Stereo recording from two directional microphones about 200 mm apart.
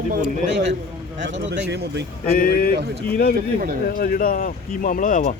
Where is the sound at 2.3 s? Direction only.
50° left (ahead or behind).